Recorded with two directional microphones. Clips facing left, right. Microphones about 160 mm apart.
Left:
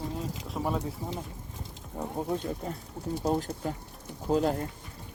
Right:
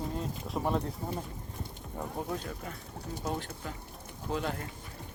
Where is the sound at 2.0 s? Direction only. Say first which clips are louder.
Left 5 dB; 20° left (ahead or behind).